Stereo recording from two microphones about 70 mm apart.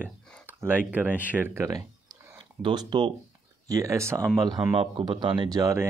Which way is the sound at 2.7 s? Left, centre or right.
Right.